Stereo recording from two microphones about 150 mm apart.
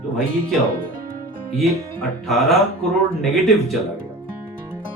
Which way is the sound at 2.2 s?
Centre (ahead or behind).